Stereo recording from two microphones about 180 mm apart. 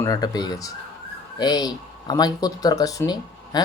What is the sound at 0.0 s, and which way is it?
Speech, 20° left (ahead or behind).